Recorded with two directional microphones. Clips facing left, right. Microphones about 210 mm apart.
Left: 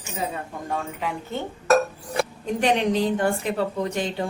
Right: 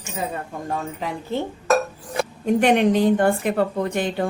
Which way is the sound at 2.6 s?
55° right (ahead or behind).